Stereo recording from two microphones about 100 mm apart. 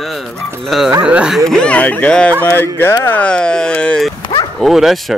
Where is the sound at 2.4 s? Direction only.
25° left (ahead or behind).